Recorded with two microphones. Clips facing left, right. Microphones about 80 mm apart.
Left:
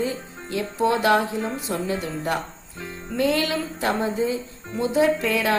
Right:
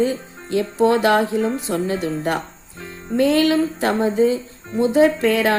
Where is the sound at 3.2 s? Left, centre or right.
Right.